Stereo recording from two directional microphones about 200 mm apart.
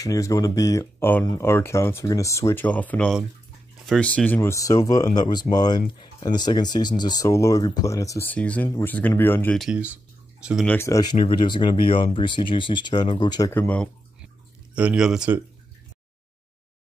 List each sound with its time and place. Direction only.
0.0 s speech: 15° left (ahead or behind); by 10.7 s centre (ahead or behind)
10.7 s speech: 15° left (ahead or behind)
11.2 s speech: 25° left (ahead or behind); by 13.8 s 10° left (ahead or behind)
14.8 s speech: 5° right (ahead or behind)